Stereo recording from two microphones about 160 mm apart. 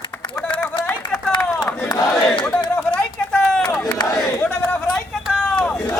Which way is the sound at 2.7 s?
10° left (ahead or behind).